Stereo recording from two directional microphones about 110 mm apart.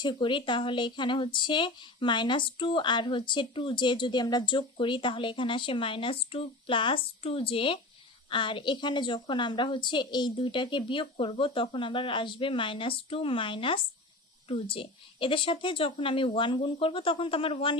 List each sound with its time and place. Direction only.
0.0 s speech: 45° left (ahead or behind)